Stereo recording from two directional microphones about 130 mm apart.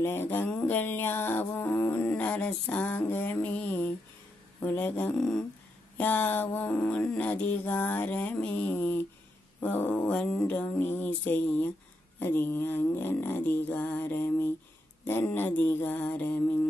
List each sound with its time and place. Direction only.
0.0 s music: 15° left (ahead or behind)
5.1 s humming: 5° left (ahead or behind)
5.9 s music: 15° left (ahead or behind)